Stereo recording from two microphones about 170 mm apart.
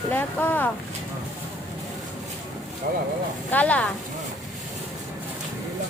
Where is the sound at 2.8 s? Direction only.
60° right (ahead or behind).